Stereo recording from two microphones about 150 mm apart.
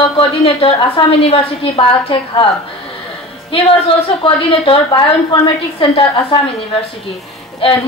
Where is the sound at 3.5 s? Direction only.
35° left (ahead or behind).